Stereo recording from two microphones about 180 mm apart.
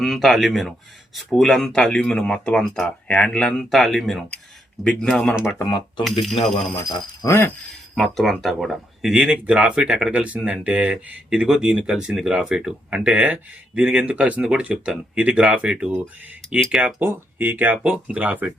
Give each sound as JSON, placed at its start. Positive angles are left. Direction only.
{"t": 0.0, "sound": "speech", "side_deg": 0}
{"t": 5.6, "sound": "speech", "side_deg": 25}
{"t": 6.1, "sound": "speech", "side_deg": 0}
{"t": 6.7, "sound": "speech", "side_deg": 15}
{"t": 7.9, "sound": "speech", "side_deg": 0}